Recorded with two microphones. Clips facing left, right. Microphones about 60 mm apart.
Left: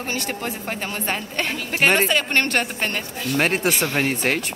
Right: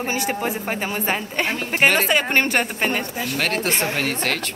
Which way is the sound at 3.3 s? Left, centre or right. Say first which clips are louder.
Left 3 dB; centre.